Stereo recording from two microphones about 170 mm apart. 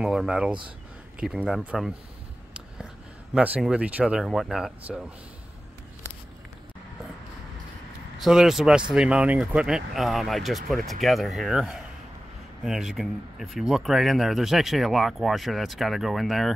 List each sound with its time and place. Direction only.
0.0 s speech: centre (ahead or behind)
3.3 s speech: 5° right (ahead or behind)
8.2 s speech: 5° right (ahead or behind)